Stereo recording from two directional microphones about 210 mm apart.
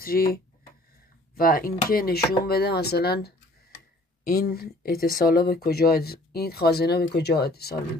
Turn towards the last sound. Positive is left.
turn(degrees=50)  # may be behind; listen again after turning